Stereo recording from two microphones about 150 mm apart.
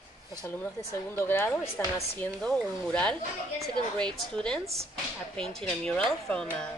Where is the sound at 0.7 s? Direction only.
15° left (ahead or behind).